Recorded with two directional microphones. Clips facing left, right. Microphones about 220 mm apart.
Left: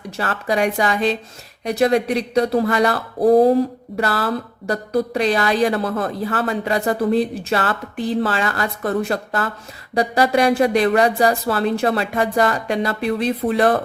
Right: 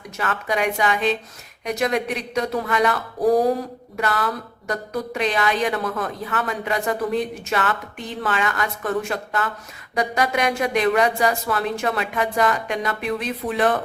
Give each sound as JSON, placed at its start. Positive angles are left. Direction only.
{"t": 0.2, "sound": "speech", "side_deg": 35}